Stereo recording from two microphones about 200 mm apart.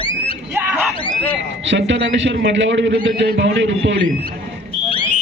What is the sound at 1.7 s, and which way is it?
A man's voice, 65° right (ahead or behind).